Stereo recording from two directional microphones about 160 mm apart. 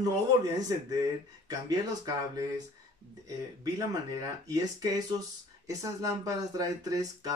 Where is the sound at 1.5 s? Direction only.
25° right (ahead or behind).